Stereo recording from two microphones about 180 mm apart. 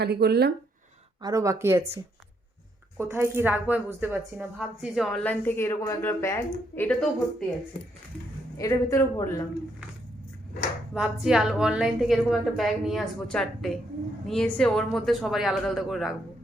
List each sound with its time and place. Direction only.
0.0 s speech: 65° right (ahead or behind)
1.2 s speech: 15° right (ahead or behind)
3.0 s a woman's voice: 15° right (ahead or behind); by 7.4 s 5° left (ahead or behind)
8.5 s a woman's voice: 20° left (ahead or behind)
10.9 s a woman's voice: 5° right (ahead or behind)